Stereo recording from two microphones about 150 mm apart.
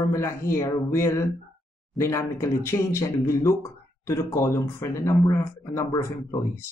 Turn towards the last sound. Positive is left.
turn(degrees=20)  # may be behind; listen again after turning